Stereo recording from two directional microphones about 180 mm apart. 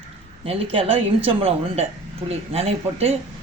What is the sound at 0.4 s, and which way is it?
Speech, 30° right (ahead or behind).